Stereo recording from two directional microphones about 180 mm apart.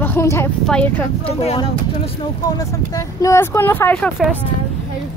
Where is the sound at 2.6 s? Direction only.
20° left (ahead or behind).